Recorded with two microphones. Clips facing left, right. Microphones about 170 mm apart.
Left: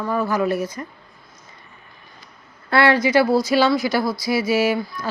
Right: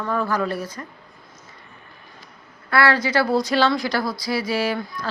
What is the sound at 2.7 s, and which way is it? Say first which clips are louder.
Speech: left 2 dB; 25° left (ahead or behind).